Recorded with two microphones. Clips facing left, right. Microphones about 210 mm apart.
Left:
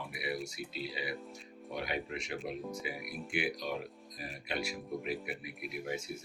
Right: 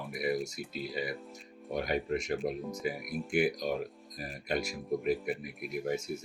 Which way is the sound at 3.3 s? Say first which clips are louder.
Right 6 dB; 45° right (ahead or behind).